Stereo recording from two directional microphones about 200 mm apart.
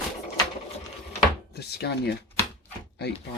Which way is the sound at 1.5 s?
55° left (ahead or behind).